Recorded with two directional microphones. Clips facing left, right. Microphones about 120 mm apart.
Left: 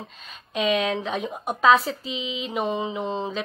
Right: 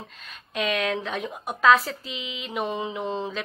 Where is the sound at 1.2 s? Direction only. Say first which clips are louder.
Left 2 dB; 25° left (ahead or behind).